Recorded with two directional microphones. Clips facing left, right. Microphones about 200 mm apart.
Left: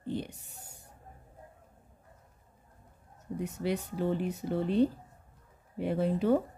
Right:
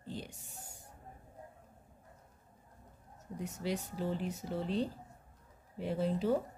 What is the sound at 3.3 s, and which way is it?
Speech, 60° left (ahead or behind).